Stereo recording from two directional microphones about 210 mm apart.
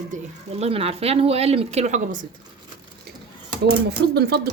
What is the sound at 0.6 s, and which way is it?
A woman's voice, 30° right (ahead or behind).